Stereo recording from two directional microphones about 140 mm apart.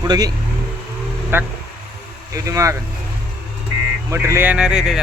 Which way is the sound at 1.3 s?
15° right (ahead or behind).